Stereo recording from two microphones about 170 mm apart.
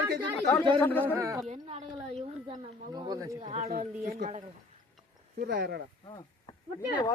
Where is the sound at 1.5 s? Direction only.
35° right (ahead or behind).